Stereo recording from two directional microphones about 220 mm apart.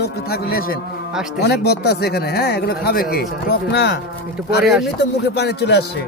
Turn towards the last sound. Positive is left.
turn(degrees=50)  # may be behind; listen again after turning